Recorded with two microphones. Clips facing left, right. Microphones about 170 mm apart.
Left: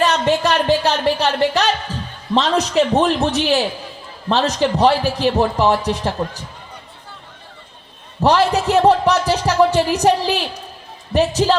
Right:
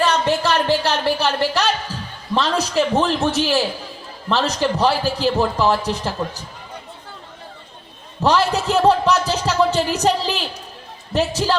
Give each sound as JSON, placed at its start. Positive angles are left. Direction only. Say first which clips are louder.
{"t": 0.0, "sound": "music", "louder": "left 2 dB", "side_deg": 15}
{"t": 2.3, "sound": "speech", "louder": "left 3 dB", "side_deg": 20}
{"t": 8.2, "sound": "speech", "louder": "left 3 dB", "side_deg": 15}